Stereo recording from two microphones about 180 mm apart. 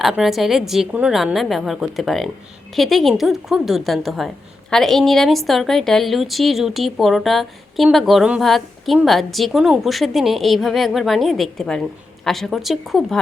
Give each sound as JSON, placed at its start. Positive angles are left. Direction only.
{"t": 0.0, "sound": "a woman's voice", "side_deg": 0}